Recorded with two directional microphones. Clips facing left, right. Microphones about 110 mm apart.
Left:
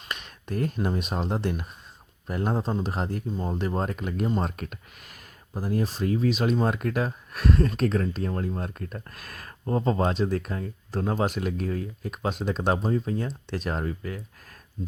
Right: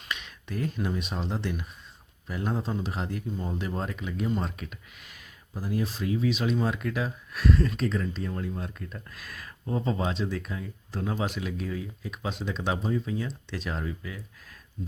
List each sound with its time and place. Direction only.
0.1 s speech: 45° left (ahead or behind)